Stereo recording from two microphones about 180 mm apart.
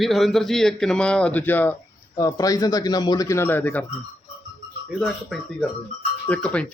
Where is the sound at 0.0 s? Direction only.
Centre (ahead or behind).